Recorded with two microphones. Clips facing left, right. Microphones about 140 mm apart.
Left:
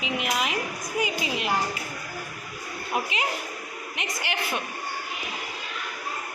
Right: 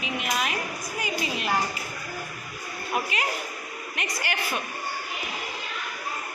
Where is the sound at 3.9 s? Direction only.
20° left (ahead or behind).